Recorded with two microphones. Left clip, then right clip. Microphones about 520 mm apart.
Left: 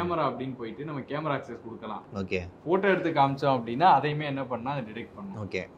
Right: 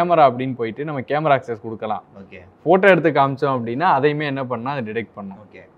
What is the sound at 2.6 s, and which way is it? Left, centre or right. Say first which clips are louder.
Speech: right 12 dB; right.